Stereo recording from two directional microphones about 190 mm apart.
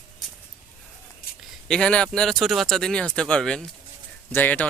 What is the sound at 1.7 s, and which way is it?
Speech, 5° left (ahead or behind).